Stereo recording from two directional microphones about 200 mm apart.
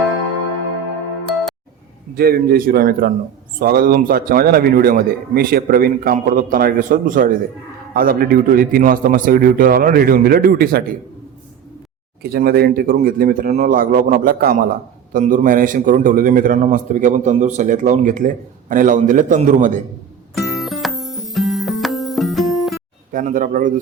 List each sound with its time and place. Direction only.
2.1 s a man's voice: 50° right (ahead or behind)
12.2 s a man's voice: 50° right (ahead or behind)
20.3 s music: centre (ahead or behind)
23.1 s a man's voice: 45° right (ahead or behind)